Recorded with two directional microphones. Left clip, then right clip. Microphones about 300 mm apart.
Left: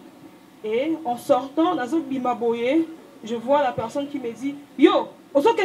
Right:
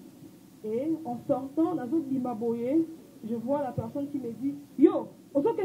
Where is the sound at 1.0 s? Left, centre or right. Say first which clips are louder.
Left 10 dB; left.